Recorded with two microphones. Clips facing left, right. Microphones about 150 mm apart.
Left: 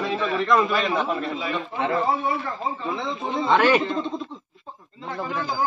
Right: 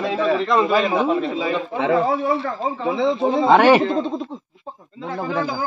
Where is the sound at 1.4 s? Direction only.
90° right.